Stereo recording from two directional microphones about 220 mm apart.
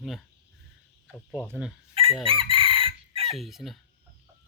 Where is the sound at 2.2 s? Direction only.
25° right (ahead or behind).